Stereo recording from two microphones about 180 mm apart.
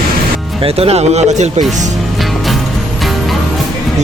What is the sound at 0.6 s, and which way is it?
Speech, 35° right (ahead or behind).